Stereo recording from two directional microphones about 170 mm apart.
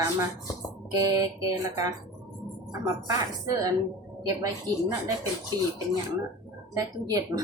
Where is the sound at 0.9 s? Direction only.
20° right (ahead or behind).